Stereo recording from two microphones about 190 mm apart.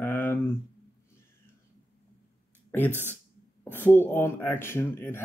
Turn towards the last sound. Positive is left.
turn(degrees=10)  # may be behind; listen again after turning